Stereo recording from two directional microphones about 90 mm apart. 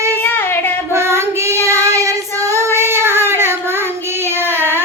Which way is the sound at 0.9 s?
30° right (ahead or behind).